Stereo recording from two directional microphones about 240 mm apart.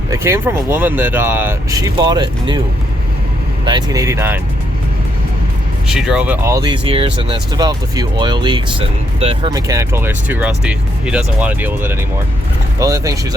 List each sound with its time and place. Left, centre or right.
0.1 s speech: centre
3.7 s speech: centre
5.9 s speech: centre